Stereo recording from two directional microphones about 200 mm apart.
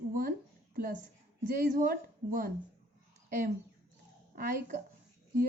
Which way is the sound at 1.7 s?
45° right (ahead or behind).